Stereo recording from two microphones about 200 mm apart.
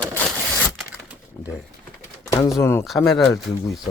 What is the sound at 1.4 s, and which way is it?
Pigeon, 10° left (ahead or behind).